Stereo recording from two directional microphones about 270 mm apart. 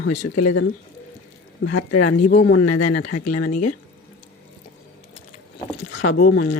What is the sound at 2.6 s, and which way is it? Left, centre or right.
Speech, left.